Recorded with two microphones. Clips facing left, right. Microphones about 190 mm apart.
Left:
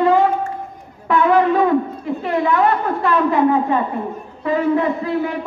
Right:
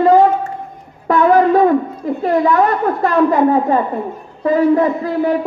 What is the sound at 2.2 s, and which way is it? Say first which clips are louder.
A man's voice: right 4 dB; 40° right (ahead or behind).